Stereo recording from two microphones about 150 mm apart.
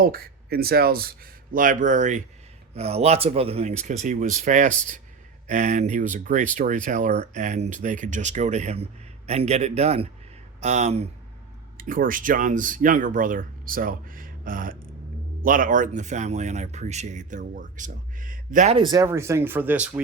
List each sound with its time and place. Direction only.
0.0 s speech: 85° right; by 2.2 s 55° right (ahead or behind)
2.7 s speech: 45° right (ahead or behind)
11.8 s speech: 65° right (ahead or behind)
18.7 s speech: 30° right (ahead or behind); by 20.0 s 10° right (ahead or behind)